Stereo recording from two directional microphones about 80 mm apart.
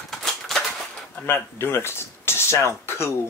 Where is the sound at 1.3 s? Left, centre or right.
Left.